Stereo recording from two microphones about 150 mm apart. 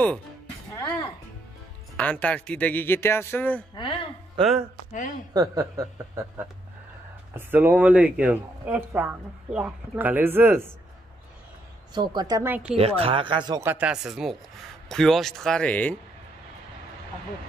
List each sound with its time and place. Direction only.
0.7 s music: 20° left (ahead or behind)
2.0 s speech: 10° left (ahead or behind)
3.7 s speech: 35° left (ahead or behind)
5.3 s a woman's voice: 25° right (ahead or behind)
11.9 s a woman's voice: 30° right (ahead or behind)
12.4 s speech: 10° right (ahead or behind)
12.7 s speech: 40° right (ahead or behind)
13.6 s speech: 10° right (ahead or behind); by 16.0 s 10° left (ahead or behind)